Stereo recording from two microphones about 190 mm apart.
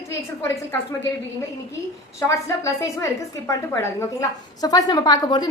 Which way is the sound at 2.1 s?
15° left (ahead or behind).